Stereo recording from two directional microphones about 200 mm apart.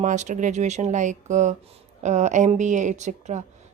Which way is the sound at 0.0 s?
35° right (ahead or behind).